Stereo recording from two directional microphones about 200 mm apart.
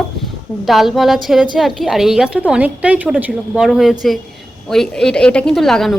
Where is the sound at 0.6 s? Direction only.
Centre (ahead or behind).